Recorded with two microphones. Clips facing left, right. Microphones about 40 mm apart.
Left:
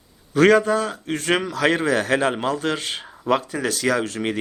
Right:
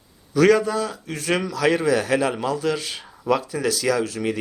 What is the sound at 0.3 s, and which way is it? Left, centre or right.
Speech, left.